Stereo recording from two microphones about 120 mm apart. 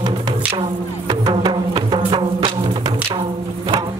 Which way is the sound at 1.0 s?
35° right (ahead or behind).